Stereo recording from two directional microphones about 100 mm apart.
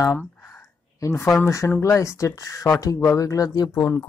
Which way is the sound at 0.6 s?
30° left (ahead or behind).